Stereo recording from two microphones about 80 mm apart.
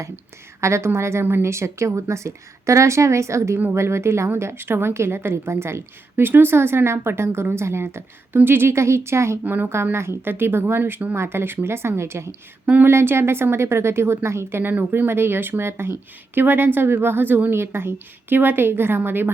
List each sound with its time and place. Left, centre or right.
0.6 s a woman's voice: right
9.4 s a woman's voice: right
12.6 s speech: centre
12.9 s a woman's voice: right